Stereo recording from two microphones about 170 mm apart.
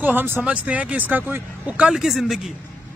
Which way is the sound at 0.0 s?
10° right (ahead or behind).